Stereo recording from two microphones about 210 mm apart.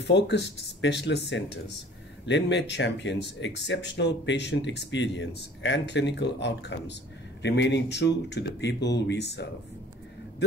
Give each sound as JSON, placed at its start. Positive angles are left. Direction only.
{"t": 0.0, "sound": "speech", "side_deg": 55}
{"t": 2.2, "sound": "speech", "side_deg": 55}